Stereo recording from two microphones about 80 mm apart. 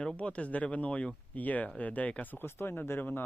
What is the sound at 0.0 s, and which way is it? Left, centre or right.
Speech, centre.